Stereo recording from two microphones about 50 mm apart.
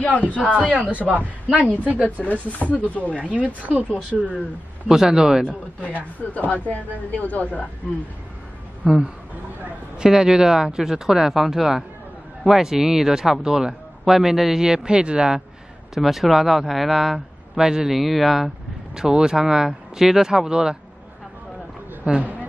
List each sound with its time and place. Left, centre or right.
0.2 s speech: left
0.6 s speech: right
1.6 s speech: left
2.2 s speech: centre
2.6 s speech: left
3.2 s speech: right
4.8 s speech: centre
5.4 s speech: right
6.3 s speech: left
8.8 s speech: centre
15.9 s speech: centre
17.6 s speech: centre
18.9 s speech: centre
22.0 s speech: right